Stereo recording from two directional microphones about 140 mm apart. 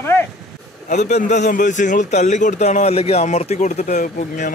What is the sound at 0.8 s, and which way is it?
A man's voice, 55° left (ahead or behind).